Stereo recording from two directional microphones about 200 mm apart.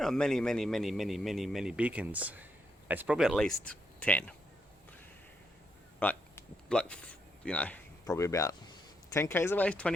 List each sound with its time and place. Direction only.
0.0 s a man's voice: centre (ahead or behind)
6.0 s a sound: 10° left (ahead or behind)
8.0 s speech: 15° left (ahead or behind)